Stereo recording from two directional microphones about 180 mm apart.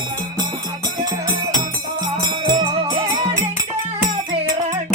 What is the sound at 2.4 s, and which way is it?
Music, 25° right (ahead or behind).